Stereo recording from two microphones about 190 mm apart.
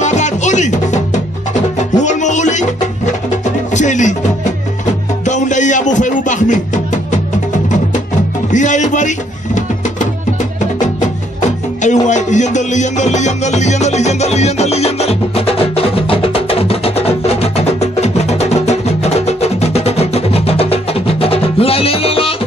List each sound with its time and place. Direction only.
0.0 s music: 40° left (ahead or behind)
5.2 s music: 40° left (ahead or behind)
8.5 s music: 40° left (ahead or behind)
11.8 s music: 40° left (ahead or behind)